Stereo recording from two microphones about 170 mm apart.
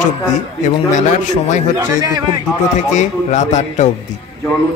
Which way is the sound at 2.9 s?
45° left (ahead or behind).